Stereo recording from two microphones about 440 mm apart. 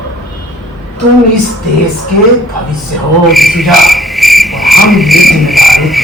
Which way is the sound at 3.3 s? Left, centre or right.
Centre.